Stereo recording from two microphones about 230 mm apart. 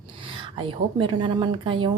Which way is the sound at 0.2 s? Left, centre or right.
Right.